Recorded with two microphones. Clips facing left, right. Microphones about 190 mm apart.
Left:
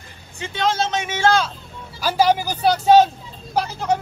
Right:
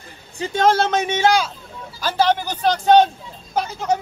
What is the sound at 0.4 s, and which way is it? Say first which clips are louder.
Speech: right 5 dB; 45° right (ahead or behind).